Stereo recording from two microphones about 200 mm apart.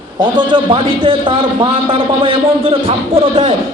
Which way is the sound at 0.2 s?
25° right (ahead or behind).